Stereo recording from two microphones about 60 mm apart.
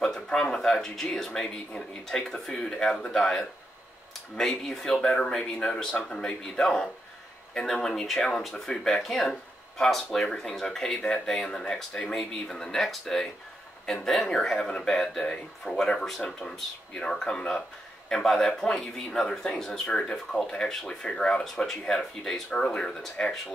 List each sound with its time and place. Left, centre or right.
0.0 s speech: centre
5.0 s speech: centre